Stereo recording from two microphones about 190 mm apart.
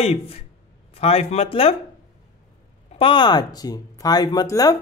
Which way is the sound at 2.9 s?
25° left (ahead or behind).